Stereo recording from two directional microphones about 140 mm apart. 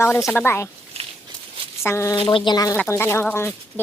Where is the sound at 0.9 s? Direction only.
45° right (ahead or behind).